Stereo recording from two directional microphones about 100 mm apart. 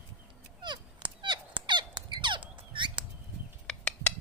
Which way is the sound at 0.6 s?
50° right (ahead or behind).